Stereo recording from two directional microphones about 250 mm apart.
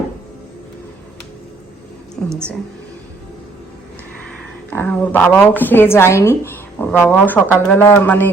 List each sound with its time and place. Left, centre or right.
4.2 s a woman's voice: centre